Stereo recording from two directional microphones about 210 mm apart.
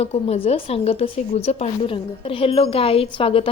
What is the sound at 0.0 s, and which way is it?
A woman's voice, 30° left (ahead or behind).